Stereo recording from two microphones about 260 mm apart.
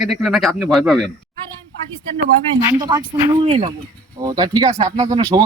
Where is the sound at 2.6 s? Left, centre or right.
Centre.